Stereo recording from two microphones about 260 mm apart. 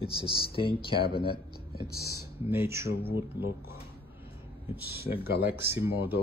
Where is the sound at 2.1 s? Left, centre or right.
Centre.